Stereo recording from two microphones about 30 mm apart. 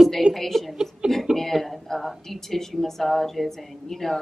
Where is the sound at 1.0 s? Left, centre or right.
Right.